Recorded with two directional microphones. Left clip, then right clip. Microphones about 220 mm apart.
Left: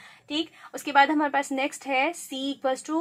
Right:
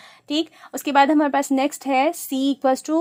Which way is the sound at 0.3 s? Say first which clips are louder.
Right 6 dB; 50° right (ahead or behind).